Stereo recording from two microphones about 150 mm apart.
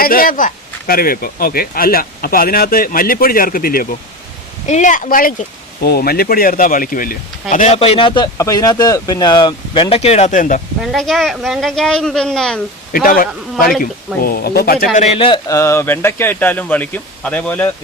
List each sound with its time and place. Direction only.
0.0 s speech: 75° left (ahead or behind)
4.6 s speech: 50° left (ahead or behind); by 7.2 s 70° left (ahead or behind)
7.5 s speech: 50° left (ahead or behind); by 8.3 s 35° left (ahead or behind)
8.4 s speech: 20° left (ahead or behind); by 10.6 s 55° left (ahead or behind)
10.9 s speech: centre (ahead or behind)
12.9 s speech: 70° left (ahead or behind)
14.2 s speech: 80° left
14.9 s a man's voice: 45° left (ahead or behind)
15.4 s speech: 20° left (ahead or behind)